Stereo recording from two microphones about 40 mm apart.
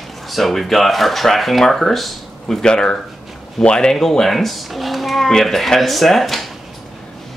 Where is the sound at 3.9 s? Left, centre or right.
Centre.